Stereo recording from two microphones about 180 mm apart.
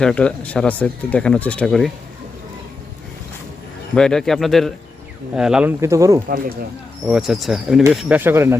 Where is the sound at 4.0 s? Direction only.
5° left (ahead or behind); by 6.2 s 20° right (ahead or behind).